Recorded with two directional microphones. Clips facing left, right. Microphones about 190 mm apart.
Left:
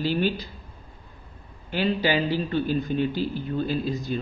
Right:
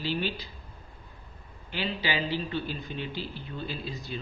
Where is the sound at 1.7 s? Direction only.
45° left (ahead or behind).